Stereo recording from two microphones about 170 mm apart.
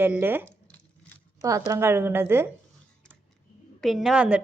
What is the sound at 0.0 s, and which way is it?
A woman's voice, 10° right (ahead or behind).